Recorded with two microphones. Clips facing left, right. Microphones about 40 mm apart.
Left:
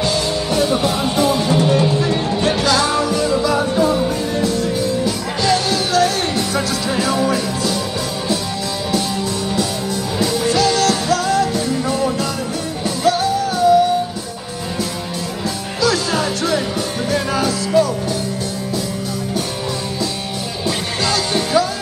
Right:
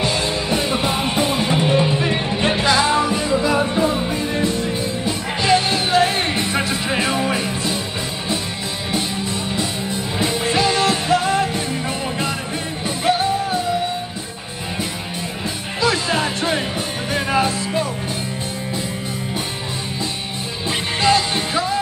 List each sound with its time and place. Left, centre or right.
0.0 s music: right
9.6 s music: right
15.8 s music: right
20.6 s music: right